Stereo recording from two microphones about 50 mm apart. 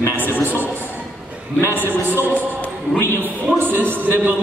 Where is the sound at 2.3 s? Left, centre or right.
Left.